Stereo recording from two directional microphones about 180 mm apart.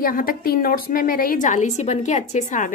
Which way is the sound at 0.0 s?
50° left (ahead or behind).